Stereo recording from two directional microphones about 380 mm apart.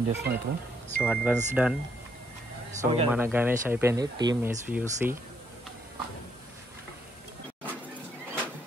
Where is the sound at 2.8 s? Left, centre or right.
Centre.